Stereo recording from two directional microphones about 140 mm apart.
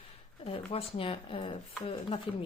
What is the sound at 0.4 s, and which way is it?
Speech, 45° left (ahead or behind).